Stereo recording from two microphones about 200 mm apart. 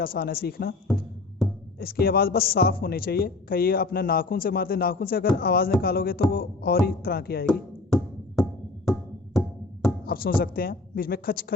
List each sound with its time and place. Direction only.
0.0 s a man's voice: 45° left (ahead or behind)
1.8 s a man's voice: 50° left (ahead or behind)
7.4 s speech: 5° left (ahead or behind)
8.4 s music: 5° left (ahead or behind)
10.1 s a man's voice: 45° left (ahead or behind)